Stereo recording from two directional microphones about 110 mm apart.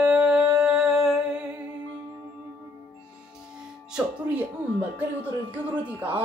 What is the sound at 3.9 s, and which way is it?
Music, 15° right (ahead or behind).